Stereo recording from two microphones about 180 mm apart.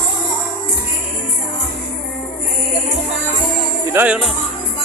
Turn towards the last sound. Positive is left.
turn(degrees=-5)  # may be behind; listen again after turning